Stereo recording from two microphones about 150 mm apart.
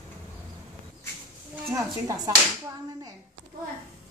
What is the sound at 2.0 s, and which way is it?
Whip, 25° right (ahead or behind).